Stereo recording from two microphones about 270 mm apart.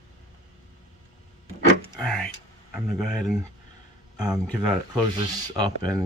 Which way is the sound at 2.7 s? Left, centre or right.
Centre.